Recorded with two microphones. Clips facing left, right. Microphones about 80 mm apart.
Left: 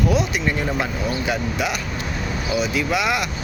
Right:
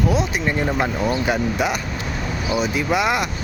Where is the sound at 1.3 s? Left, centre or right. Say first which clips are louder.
Right 3 dB; right.